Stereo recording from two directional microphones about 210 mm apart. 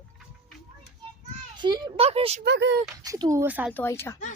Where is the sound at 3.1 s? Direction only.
15° right (ahead or behind).